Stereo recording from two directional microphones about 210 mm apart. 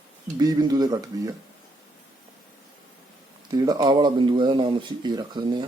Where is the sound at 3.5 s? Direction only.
20° right (ahead or behind).